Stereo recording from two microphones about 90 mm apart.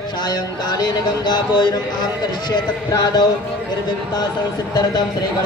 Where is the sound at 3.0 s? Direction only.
50° left (ahead or behind).